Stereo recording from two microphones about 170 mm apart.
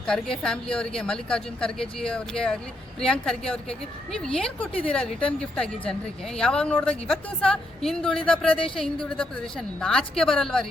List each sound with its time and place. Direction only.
0.0 s speech: 5° left (ahead or behind)
8.4 s speech: 30° left (ahead or behind)
8.7 s speech: 5° left (ahead or behind)